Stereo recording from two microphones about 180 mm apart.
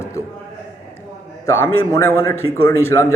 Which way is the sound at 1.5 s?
15° left (ahead or behind).